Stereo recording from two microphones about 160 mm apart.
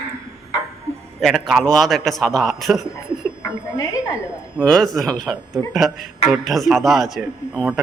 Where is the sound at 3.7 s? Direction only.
20° left (ahead or behind).